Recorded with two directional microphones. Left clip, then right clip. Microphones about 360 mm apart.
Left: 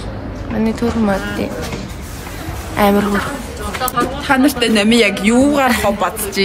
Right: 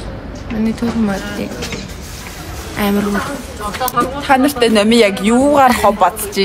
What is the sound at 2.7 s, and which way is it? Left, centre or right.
Speech, centre.